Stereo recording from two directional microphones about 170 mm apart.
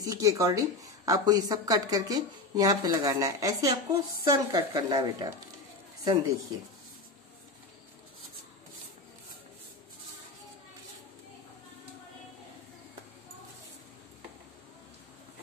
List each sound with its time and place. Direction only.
0.0 s speech: 20° right (ahead or behind)